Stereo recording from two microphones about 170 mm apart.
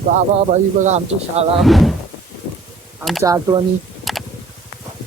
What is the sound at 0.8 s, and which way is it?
Speech, 40° right (ahead or behind).